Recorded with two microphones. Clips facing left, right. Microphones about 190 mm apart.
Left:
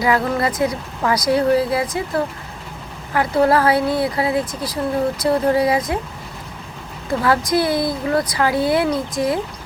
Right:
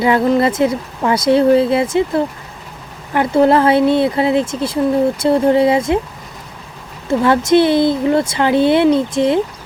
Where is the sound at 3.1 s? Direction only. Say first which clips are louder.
Right 4 dB; 25° right (ahead or behind).